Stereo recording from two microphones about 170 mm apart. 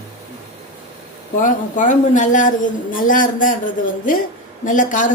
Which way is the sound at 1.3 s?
50° left (ahead or behind).